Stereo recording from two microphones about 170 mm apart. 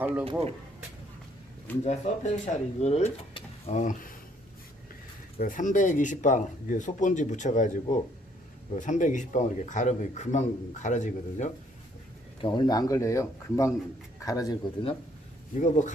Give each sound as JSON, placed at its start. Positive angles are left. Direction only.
{"t": 0.3, "sound": "speech", "side_deg": -35}
{"t": 1.8, "sound": "speech", "side_deg": 40}
{"t": 5.4, "sound": "speech", "side_deg": 50}
{"t": 12.4, "sound": "speech", "side_deg": 25}
{"t": 15.5, "sound": "speech", "side_deg": 45}